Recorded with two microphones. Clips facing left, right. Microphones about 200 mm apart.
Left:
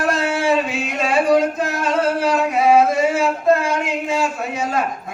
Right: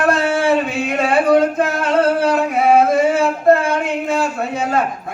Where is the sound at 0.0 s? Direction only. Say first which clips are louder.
Right 3 dB; 60° right (ahead or behind).